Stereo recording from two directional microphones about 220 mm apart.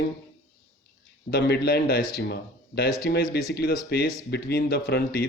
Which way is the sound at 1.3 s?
45° left (ahead or behind).